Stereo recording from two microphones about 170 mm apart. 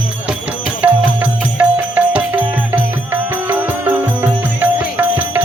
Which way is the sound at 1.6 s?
10° right (ahead or behind).